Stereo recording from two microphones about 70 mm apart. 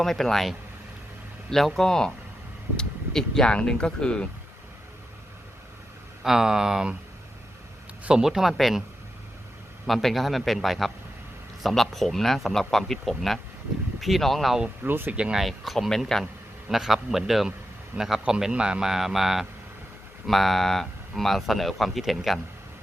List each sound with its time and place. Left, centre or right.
0.0 s speech: centre
6.2 s a man's voice: centre
8.0 s speech: centre
9.8 s speech: centre
14.8 s speech: right
15.1 s a man's voice: centre
15.4 s a man's voice: centre